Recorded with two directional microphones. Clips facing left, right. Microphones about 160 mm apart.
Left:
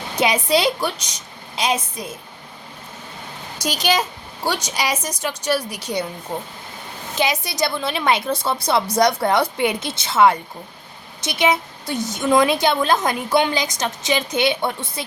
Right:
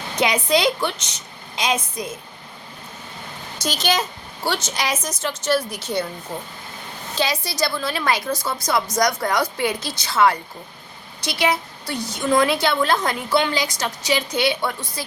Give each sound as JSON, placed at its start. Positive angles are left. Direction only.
{"t": 0.2, "sound": "a woman's voice", "side_deg": 10}
{"t": 3.6, "sound": "a woman's voice", "side_deg": 10}
{"t": 7.2, "sound": "a woman's voice", "side_deg": 20}